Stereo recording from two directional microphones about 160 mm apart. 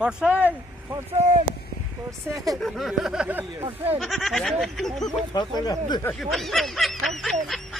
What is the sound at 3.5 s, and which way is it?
Speech, 15° right (ahead or behind).